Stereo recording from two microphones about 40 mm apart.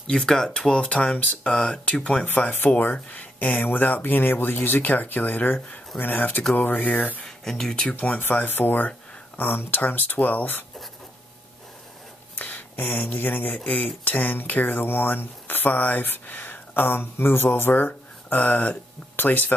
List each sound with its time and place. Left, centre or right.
0.0 s speech: centre
1.4 s speech: left
2.2 s speech: left
7.2 s speech: centre
8.2 s speech: left
12.4 s speech: left
17.8 s speech: left
19.1 s speech: left